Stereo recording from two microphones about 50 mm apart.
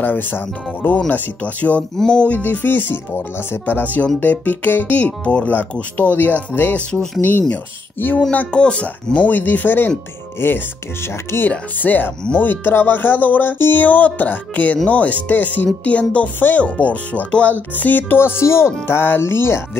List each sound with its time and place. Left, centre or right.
0.0 s speech: left
2.0 s music: centre
2.2 s speech: left
5.9 s speech: left
8.5 s speech: left
8.8 s speech: left
10.4 s speech: left
11.8 s speech: left
13.8 s speech: left
18.4 s speech: left
18.9 s speech: left